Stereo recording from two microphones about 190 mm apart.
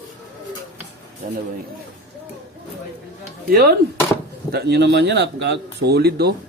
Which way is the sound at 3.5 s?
55° right (ahead or behind).